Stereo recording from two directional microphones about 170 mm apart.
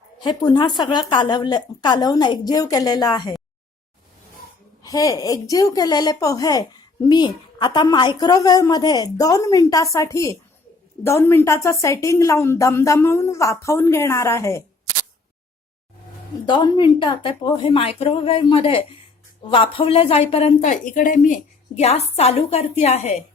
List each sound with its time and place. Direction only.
0.2 s a woman's voice: 25° left (ahead or behind)
4.8 s a woman's voice: 20° left (ahead or behind)
16.5 s speech: 25° left (ahead or behind)